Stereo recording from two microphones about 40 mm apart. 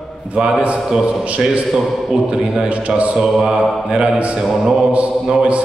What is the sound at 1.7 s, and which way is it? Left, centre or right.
Speech, centre.